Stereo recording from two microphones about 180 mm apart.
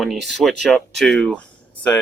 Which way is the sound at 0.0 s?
Centre (ahead or behind).